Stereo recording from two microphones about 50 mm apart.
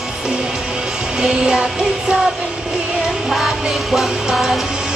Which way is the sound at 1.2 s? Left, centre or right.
Centre.